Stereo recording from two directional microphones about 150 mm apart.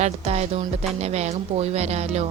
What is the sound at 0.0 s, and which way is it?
A woman's voice, 45° right (ahead or behind).